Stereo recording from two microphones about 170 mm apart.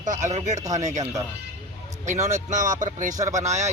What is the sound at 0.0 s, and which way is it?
Speech, 45° right (ahead or behind).